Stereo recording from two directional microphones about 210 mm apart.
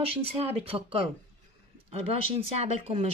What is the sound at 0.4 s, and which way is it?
Speech, 25° right (ahead or behind).